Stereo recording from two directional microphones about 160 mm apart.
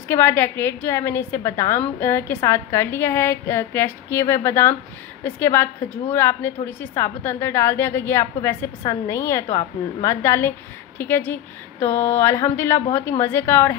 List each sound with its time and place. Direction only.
0.1 s a woman's voice: 15° left (ahead or behind)